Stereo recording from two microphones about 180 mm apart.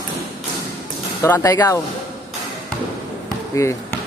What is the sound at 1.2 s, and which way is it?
Speech, 15° left (ahead or behind).